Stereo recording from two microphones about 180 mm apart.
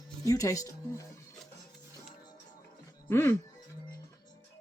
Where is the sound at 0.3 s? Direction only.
20° left (ahead or behind).